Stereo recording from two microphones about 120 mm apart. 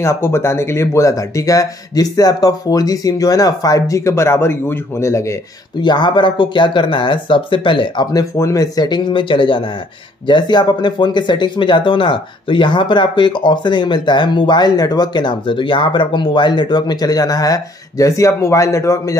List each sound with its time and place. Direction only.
0.0 s speech: 20° left (ahead or behind)
5.8 s speech: 40° left (ahead or behind)
8.1 s speech: 25° left (ahead or behind)